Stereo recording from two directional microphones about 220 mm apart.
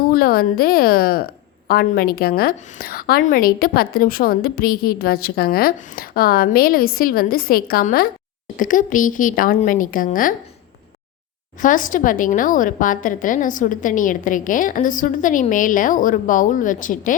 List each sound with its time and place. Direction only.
0.1 s a woman's voice: 45° left (ahead or behind)
11.6 s a woman's voice: 35° left (ahead or behind)